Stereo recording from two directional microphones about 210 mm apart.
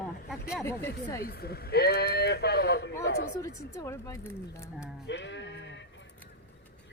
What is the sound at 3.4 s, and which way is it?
Speech, 15° left (ahead or behind).